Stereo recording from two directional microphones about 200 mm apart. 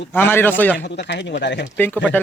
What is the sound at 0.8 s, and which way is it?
Speech, 60° left (ahead or behind).